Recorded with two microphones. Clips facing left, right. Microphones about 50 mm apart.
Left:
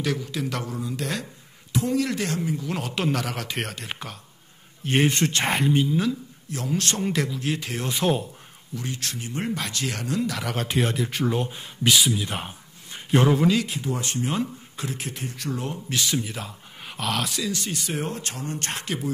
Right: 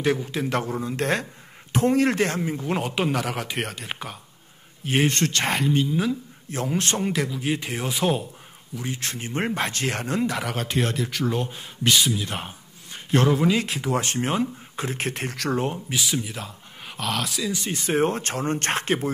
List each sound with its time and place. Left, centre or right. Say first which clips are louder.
0.0 s speech: right 4 dB; right
2.8 s a man's voice: right 1 dB; centre
6.5 s speech: right 4 dB; right
7.0 s a man's voice: even; centre
8.8 s speech: right 2 dB; right
9.1 s speech: right 3 dB; right
10.4 s speech: even; centre
13.7 s speech: right 4 dB; right
15.0 s speech: right 5 dB; right
15.5 s speech: right 6 dB; right
15.9 s speech: even; centre
17.6 s speech: right 7 dB; right